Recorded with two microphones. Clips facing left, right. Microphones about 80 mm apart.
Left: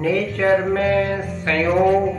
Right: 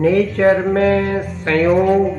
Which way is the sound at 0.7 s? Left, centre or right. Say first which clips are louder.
Right 3 dB; right.